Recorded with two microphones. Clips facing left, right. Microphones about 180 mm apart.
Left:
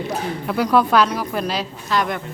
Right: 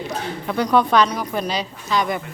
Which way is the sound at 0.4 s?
5° left (ahead or behind).